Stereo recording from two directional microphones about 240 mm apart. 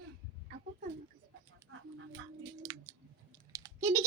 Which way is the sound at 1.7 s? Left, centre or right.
Right.